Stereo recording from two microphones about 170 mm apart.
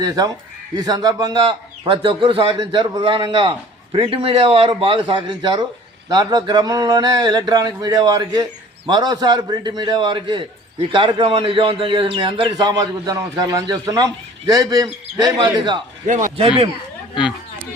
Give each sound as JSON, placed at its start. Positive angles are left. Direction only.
{"t": 0.7, "sound": "a man's voice", "side_deg": -20}
{"t": 16.0, "sound": "speech", "side_deg": -50}